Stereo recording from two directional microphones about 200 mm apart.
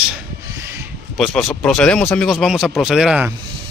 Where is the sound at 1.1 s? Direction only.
Centre (ahead or behind).